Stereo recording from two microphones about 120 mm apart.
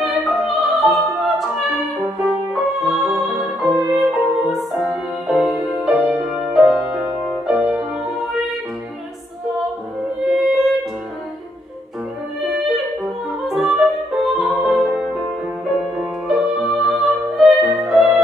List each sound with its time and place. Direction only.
0.0 s opera: centre (ahead or behind)
2.5 s music: centre (ahead or behind)
10.2 s music: centre (ahead or behind)
13.5 s music: 5° right (ahead or behind)